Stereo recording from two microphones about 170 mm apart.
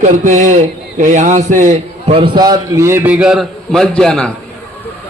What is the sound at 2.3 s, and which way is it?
Speech, 25° right (ahead or behind).